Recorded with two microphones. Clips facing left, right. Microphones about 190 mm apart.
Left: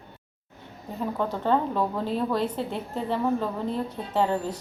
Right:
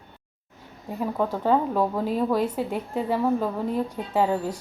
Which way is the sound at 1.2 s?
5° right (ahead or behind).